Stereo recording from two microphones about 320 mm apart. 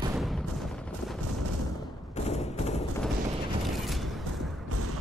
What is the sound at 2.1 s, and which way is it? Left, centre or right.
Fusillade, centre.